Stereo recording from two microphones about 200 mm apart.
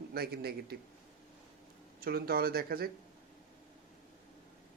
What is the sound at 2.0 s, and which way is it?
Speech, 50° right (ahead or behind).